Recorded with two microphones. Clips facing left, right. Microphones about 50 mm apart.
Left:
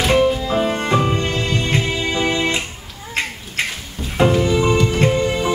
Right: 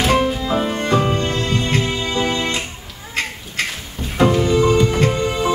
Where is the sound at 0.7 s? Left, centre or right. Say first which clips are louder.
Even; centre.